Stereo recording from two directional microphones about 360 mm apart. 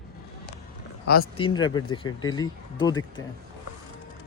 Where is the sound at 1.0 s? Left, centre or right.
Left.